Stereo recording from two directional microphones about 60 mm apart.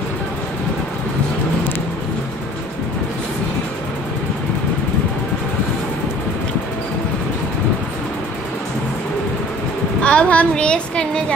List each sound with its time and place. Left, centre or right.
10.0 s a woman's voice: left